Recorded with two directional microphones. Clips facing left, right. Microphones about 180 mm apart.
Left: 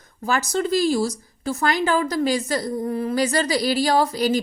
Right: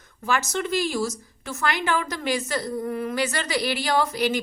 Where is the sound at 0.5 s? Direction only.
35° left (ahead or behind).